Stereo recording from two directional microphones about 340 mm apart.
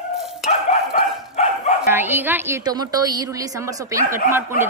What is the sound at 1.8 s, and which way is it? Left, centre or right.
A woman's voice, centre.